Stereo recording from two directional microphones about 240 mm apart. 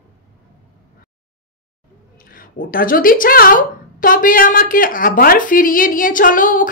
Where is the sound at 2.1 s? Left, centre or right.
Left.